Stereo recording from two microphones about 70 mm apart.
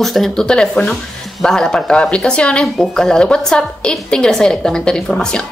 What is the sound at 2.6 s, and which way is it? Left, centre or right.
Speech, centre.